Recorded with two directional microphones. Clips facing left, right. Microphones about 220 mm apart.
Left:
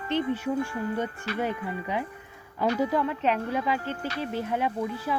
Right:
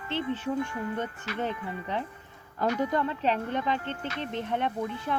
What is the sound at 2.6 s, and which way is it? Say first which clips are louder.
Speech: left 2 dB; 35° left (ahead or behind).